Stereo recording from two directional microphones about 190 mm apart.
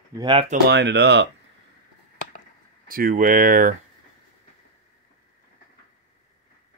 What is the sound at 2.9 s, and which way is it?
Speech, 50° right (ahead or behind).